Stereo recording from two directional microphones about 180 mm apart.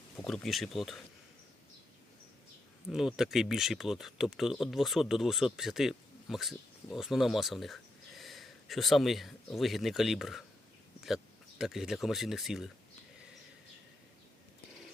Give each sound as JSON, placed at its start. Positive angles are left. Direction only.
{"t": 0.3, "sound": "speech", "side_deg": 0}
{"t": 2.9, "sound": "speech", "side_deg": -5}